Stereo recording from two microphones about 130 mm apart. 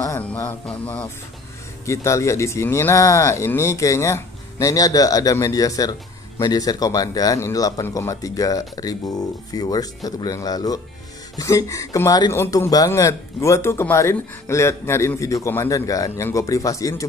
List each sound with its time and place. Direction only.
0.2 s music: 10° left (ahead or behind)
1.9 s speech: 20° left (ahead or behind)